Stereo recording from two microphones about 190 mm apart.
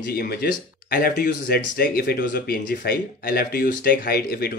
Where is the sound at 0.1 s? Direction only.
55° left (ahead or behind).